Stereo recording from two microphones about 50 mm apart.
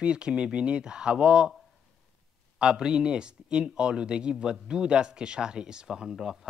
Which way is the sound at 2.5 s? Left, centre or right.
Centre.